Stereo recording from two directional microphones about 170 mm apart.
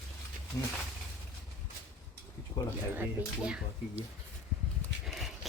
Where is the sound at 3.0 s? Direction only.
5° right (ahead or behind).